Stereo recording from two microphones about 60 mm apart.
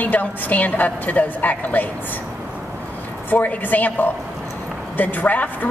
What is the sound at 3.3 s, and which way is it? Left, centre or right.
A woman's voice, left.